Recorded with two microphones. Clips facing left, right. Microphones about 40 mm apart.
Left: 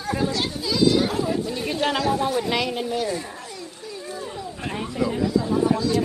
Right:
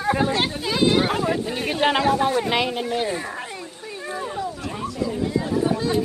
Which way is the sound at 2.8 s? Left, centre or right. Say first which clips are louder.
Right 1 dB; right.